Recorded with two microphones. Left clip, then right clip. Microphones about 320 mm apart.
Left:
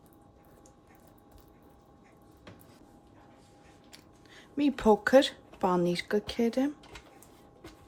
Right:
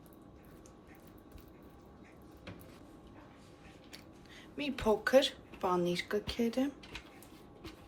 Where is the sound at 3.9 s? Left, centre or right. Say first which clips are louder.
Left 1 dB; left.